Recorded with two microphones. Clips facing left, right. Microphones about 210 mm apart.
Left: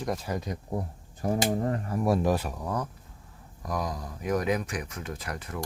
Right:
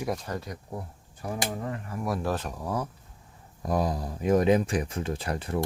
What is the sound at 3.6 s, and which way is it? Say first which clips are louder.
Speech: right 5 dB; 30° right (ahead or behind).